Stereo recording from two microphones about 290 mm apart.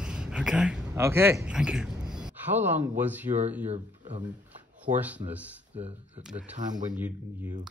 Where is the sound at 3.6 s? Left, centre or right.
Right.